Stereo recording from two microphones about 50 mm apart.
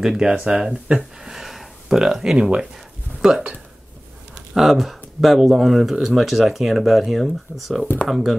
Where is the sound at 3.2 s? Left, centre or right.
Centre.